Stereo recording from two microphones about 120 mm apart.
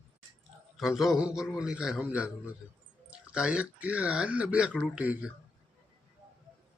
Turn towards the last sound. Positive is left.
turn(degrees=-10)  # may be behind; listen again after turning